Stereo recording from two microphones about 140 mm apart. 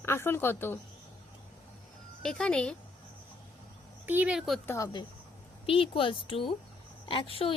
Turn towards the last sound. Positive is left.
turn(degrees=40)  # may be behind; listen again after turning